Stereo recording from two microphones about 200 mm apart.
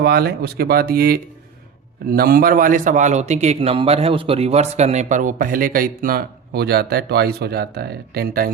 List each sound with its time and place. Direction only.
0.0 s a man's voice: 50° right (ahead or behind)